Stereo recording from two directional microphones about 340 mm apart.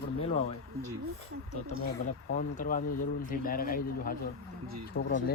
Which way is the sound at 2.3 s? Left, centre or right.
Left.